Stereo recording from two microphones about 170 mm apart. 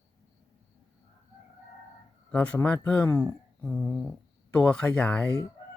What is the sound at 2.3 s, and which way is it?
Speech, 5° left (ahead or behind).